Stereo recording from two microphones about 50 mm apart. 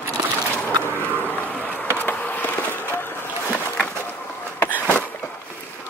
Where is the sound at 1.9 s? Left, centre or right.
Left.